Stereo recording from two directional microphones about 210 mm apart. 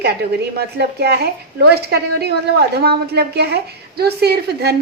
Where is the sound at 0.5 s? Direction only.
50° right (ahead or behind).